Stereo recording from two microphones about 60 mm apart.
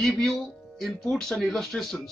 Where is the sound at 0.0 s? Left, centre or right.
Centre.